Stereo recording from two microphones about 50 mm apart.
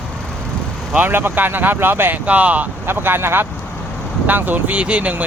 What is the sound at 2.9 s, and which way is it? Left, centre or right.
Speech, right.